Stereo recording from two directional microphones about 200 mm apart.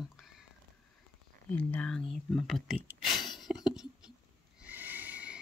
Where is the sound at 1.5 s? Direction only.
5° left (ahead or behind).